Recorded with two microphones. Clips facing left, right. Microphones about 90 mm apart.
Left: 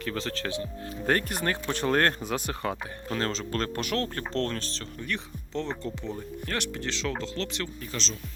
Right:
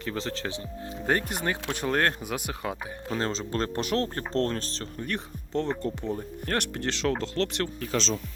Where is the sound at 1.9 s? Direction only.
Centre (ahead or behind).